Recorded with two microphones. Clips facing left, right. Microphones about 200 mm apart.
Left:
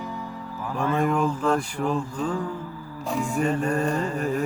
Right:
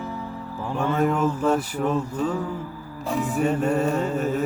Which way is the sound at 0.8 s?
5° right (ahead or behind).